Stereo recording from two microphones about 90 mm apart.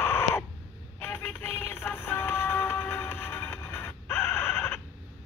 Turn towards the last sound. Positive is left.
turn(degrees=20)  # may be behind; listen again after turning